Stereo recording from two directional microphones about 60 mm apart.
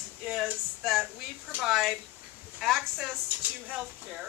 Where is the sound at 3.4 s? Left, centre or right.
Right.